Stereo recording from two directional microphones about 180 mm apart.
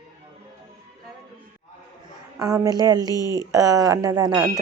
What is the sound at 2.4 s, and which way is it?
A woman's voice, 20° right (ahead or behind).